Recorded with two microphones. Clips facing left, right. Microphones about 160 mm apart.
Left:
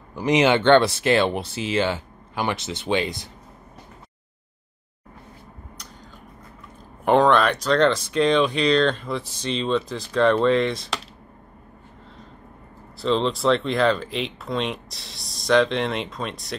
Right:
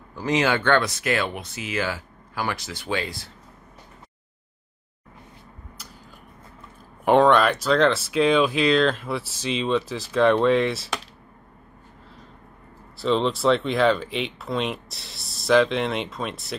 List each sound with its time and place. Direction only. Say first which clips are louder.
0.1 s speech: left 4 dB; 20° left (ahead or behind)
7.1 s speech: even; centre (ahead or behind)
13.0 s speech: even; centre (ahead or behind)